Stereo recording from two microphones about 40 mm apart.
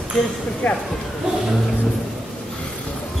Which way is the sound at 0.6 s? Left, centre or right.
Left.